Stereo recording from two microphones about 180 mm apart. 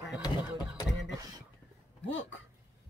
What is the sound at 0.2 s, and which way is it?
Speech, 20° left (ahead or behind).